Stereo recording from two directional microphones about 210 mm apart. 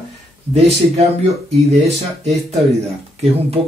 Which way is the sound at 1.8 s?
30° right (ahead or behind).